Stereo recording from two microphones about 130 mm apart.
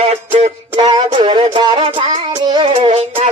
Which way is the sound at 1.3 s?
45° right (ahead or behind).